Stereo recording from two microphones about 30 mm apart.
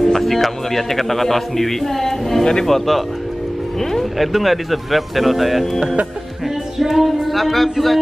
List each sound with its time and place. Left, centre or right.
0.0 s a man's voice: centre
4.2 s speech: centre
6.8 s speech: centre